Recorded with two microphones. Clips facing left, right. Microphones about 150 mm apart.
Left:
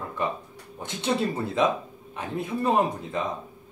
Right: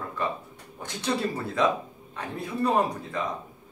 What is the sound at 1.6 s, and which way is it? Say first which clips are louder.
Speech: even; 25° left (ahead or behind).